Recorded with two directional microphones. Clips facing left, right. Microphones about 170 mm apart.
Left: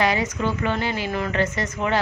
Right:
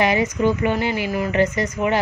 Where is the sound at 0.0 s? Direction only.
20° right (ahead or behind).